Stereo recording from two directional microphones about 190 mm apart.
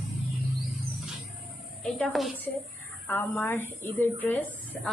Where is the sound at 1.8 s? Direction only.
Centre (ahead or behind).